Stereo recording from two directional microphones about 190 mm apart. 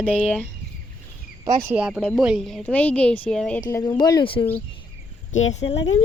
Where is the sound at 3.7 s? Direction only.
15° left (ahead or behind).